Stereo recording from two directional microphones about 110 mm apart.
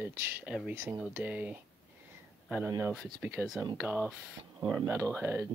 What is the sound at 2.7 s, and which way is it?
Speech, 25° right (ahead or behind).